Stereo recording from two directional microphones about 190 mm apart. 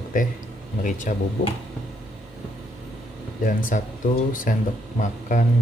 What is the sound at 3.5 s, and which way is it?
Speech, 45° left (ahead or behind).